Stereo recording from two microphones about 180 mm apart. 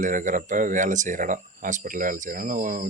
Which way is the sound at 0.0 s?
45° right (ahead or behind).